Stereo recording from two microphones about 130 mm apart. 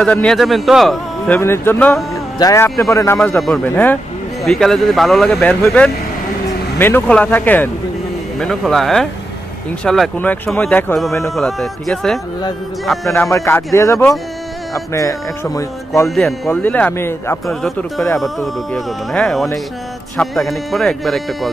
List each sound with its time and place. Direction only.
0.0 s speech: 5° left (ahead or behind)
1.4 s speech: 20° left (ahead or behind)
2.3 s speech: 25° left (ahead or behind)
3.3 s speech: centre (ahead or behind)
3.6 s speech: 15° left (ahead or behind)
4.5 s speech: 5° left (ahead or behind)
8.4 s speech: centre (ahead or behind)
10.1 s speech: 15° left (ahead or behind)
11.2 s speech: centre (ahead or behind)
13.1 s speech: 20° left (ahead or behind)
16.4 s speech: 15° left (ahead or behind)
17.5 s speech: centre (ahead or behind)